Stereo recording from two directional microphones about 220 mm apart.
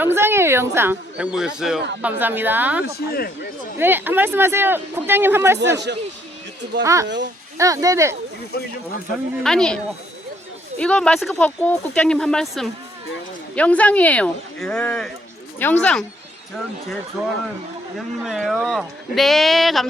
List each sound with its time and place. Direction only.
0.0 s speech: 10° right (ahead or behind)
2.8 s speech: 45° left (ahead or behind)
3.8 s speech: 10° right (ahead or behind)
5.5 s a man's voice: 50° right (ahead or behind)
6.8 s speech: 15° right (ahead or behind)
9.4 s speech: centre (ahead or behind)
17.2 s speech: 5° right (ahead or behind)